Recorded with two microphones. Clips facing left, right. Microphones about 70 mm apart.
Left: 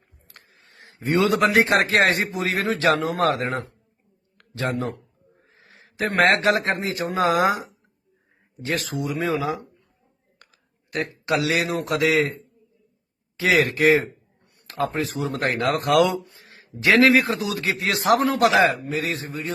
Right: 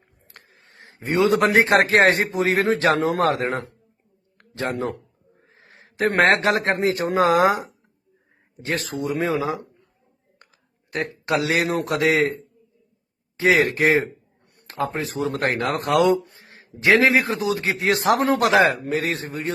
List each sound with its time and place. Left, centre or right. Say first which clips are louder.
0.3 s a sound: right 2 dB; right
1.0 s a man's voice: right 1 dB; right
1.4 s a man's voice: right 2 dB; right
4.4 s a sound: even; right
4.7 s speech: right 1 dB; right
8.9 s a man's voice: right 3 dB; right
10.9 s speech: right 1 dB; right
13.3 s a man's voice: right 2 dB; right
13.7 s speech: left 1 dB; right
15.9 s a man's voice: right 2 dB; right
16.2 s a sound: right 1 dB; right
17.2 s speech: right 2 dB; right